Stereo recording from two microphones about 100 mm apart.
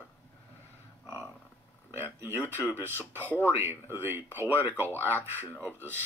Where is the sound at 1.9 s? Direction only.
20° right (ahead or behind).